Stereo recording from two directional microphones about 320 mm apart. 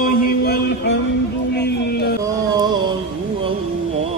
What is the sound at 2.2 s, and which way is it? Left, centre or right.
Music, centre.